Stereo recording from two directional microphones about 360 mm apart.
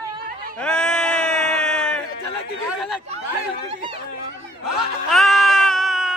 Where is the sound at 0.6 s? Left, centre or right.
Centre.